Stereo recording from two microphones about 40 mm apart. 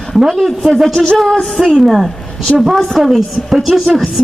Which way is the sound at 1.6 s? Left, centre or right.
Centre.